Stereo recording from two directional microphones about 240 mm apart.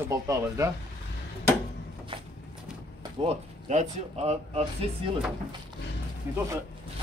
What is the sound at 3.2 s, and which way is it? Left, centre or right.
Speech, right.